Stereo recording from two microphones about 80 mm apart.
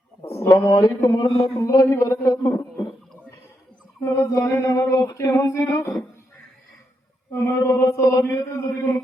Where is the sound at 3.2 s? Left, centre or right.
Left.